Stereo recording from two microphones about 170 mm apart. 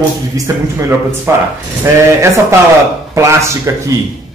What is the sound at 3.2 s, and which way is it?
Speech, 15° right (ahead or behind).